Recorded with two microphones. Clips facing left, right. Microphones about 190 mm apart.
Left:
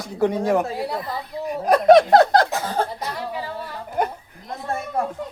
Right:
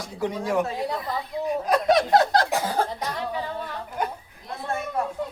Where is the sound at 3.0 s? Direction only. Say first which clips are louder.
Even; 10° left (ahead or behind).